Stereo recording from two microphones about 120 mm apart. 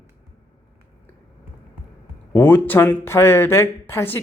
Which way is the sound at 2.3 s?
15° left (ahead or behind).